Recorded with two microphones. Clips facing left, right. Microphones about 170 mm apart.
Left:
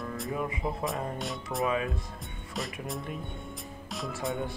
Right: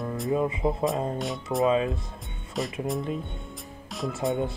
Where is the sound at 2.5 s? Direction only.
Centre (ahead or behind).